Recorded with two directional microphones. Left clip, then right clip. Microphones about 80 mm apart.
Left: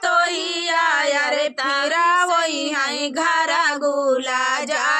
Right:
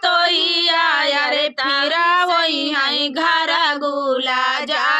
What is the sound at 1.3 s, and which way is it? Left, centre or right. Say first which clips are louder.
Female singing: right 2 dB; left.